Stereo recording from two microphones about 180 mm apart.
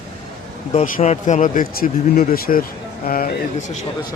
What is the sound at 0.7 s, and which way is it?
Speech, 40° left (ahead or behind).